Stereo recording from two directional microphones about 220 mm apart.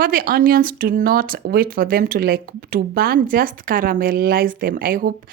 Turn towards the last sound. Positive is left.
turn(degrees=-40)  # may be behind; listen again after turning